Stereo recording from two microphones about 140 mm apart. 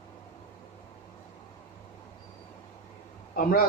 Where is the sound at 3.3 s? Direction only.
90° left.